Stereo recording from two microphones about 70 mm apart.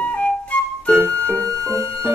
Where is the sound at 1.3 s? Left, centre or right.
Centre.